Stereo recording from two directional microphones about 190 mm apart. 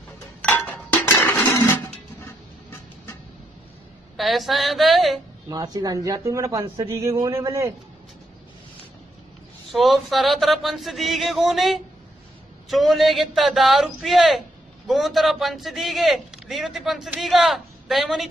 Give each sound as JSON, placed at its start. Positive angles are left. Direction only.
{"t": 0.4, "sound": "chink", "side_deg": 10}
{"t": 4.2, "sound": "speech", "side_deg": 0}
{"t": 5.5, "sound": "speech", "side_deg": -20}
{"t": 9.7, "sound": "speech", "side_deg": 0}